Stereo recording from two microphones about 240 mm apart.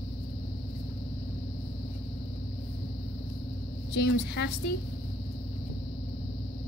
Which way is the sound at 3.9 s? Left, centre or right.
Left.